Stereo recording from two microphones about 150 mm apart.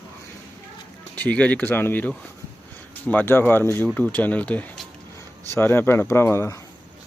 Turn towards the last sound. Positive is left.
turn(degrees=15)  # may be behind; listen again after turning